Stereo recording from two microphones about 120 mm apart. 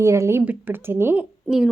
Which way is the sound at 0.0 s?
25° right (ahead or behind).